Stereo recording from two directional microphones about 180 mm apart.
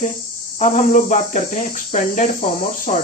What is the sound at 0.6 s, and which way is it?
Speech, 45° left (ahead or behind).